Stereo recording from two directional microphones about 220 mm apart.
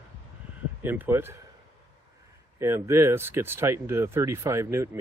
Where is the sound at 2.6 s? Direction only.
10° right (ahead or behind).